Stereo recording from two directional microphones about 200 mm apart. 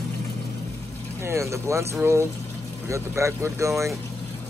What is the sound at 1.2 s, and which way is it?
Speech, 15° right (ahead or behind).